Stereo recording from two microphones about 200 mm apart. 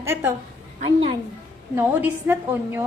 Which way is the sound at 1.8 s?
10° right (ahead or behind).